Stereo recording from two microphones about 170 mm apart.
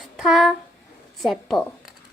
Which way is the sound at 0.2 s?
Centre (ahead or behind).